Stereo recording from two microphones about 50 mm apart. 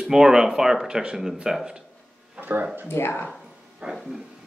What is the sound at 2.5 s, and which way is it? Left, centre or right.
Speech, right.